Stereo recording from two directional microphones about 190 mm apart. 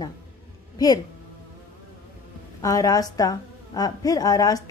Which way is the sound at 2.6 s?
20° left (ahead or behind).